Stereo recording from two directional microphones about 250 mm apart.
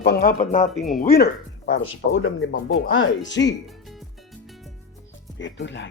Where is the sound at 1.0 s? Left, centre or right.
Left.